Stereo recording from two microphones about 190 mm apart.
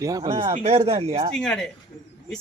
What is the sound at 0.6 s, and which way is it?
Speech, 35° right (ahead or behind).